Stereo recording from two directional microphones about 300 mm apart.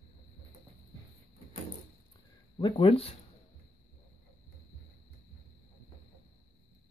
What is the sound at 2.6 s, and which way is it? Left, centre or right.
Speech, centre.